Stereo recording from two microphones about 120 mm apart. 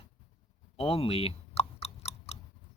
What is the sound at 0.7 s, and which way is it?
Chewing, 55° left (ahead or behind).